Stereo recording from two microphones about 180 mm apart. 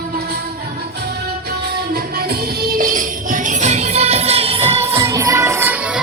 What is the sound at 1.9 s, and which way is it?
Music, 60° right (ahead or behind).